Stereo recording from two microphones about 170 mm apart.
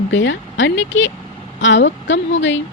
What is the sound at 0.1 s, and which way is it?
A woman's voice, 90° left.